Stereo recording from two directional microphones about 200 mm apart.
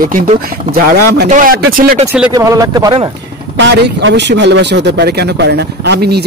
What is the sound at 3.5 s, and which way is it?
Speech, 60° right (ahead or behind).